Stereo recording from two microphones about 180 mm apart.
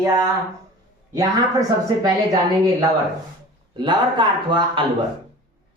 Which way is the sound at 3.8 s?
25° right (ahead or behind).